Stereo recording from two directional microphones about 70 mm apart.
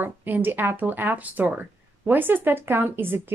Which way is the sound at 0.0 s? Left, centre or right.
Right.